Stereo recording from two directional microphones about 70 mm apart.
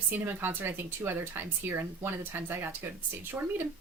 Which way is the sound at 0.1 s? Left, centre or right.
Right.